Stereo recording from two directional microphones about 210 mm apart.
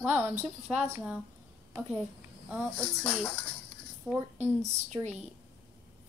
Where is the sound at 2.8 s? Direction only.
5° left (ahead or behind).